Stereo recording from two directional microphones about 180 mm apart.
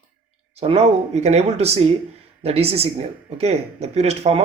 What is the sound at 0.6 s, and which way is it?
Speech, 35° right (ahead or behind).